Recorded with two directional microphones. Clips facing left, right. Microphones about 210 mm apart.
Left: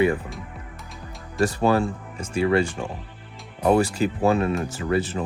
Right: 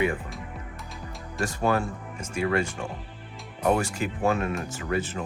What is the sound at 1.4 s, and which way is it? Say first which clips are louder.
Speech: left 5 dB; 35° left (ahead or behind).